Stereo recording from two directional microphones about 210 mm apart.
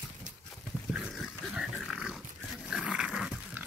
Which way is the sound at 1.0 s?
5° right (ahead or behind).